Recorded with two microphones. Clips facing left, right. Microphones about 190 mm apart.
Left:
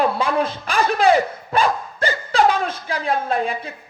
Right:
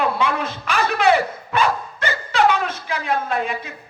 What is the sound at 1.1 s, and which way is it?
Dog, 35° left (ahead or behind).